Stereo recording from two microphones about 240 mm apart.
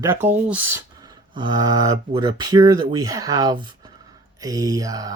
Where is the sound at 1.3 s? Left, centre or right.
Centre.